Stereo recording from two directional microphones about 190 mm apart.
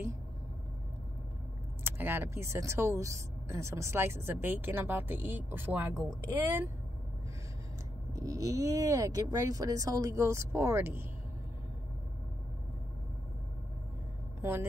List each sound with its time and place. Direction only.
1.9 s speech: 10° right (ahead or behind)
8.1 s speech: 15° right (ahead or behind)
14.4 s a woman's voice: 10° right (ahead or behind)